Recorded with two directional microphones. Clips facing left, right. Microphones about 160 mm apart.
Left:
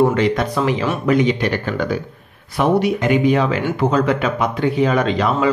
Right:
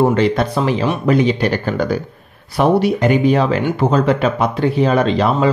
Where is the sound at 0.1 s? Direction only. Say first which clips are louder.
Right 2 dB; 35° right (ahead or behind).